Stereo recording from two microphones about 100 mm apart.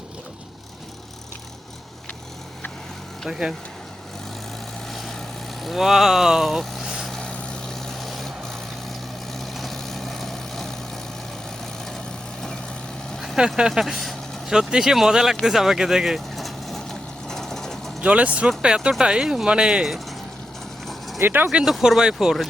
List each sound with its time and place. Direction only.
3.2 s speech: 5° right (ahead or behind)
4.9 s vehicle: centre (ahead or behind)
5.6 s speech: 5° right (ahead or behind)
7.1 s vehicle: 10° left (ahead or behind)
13.1 s speech: 5° right (ahead or behind)
15.4 s vehicle: 5° right (ahead or behind)
18.0 s speech: 15° right (ahead or behind)
21.2 s speech: 20° right (ahead or behind)
21.6 s speech: 5° right (ahead or behind)